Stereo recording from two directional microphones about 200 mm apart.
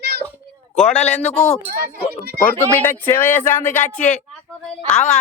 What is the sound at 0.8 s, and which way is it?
Speech, 35° left (ahead or behind).